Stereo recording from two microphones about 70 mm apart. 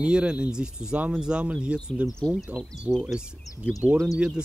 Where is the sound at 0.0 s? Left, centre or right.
Centre.